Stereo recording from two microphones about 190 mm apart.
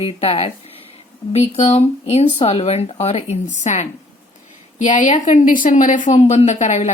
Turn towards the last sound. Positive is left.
turn(degrees=40)  # may be behind; listen again after turning